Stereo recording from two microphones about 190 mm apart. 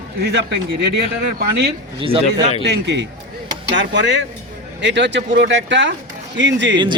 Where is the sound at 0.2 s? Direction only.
65° right (ahead or behind).